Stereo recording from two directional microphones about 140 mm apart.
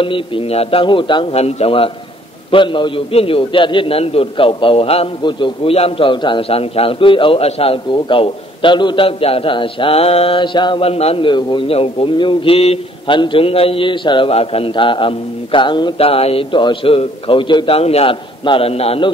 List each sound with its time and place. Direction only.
0.0 s a man's voice: 40° left (ahead or behind)